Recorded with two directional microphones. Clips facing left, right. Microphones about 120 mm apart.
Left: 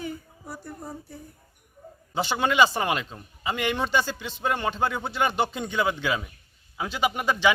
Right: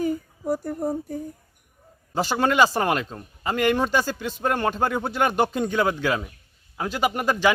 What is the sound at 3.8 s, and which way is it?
A man's voice, 45° right (ahead or behind).